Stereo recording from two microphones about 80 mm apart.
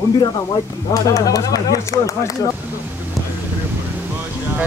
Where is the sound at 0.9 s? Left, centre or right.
Left.